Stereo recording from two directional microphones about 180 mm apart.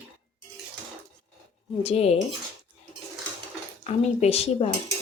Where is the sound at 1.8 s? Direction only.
35° left (ahead or behind).